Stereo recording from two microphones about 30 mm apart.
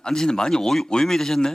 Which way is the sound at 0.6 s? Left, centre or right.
Centre.